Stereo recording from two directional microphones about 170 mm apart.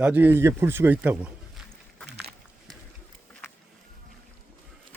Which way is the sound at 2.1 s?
80° right.